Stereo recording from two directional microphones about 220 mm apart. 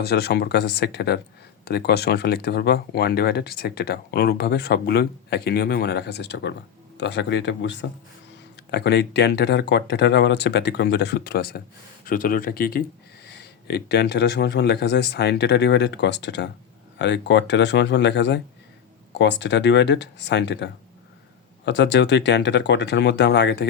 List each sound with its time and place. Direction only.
0.0 s speech: 45° left (ahead or behind)